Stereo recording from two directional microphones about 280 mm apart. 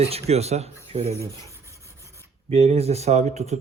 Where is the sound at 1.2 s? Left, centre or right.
Centre.